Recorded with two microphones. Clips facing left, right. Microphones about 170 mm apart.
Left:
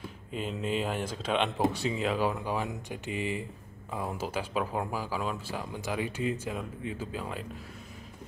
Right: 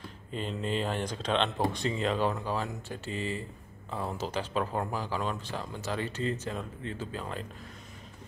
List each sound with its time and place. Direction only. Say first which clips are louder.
0.3 s speech: left 1 dB; 5° left (ahead or behind)